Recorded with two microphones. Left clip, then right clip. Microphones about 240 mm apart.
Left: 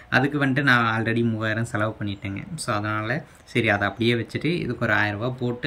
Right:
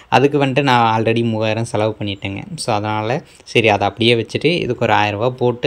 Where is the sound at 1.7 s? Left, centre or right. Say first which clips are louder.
Right 8 dB; right.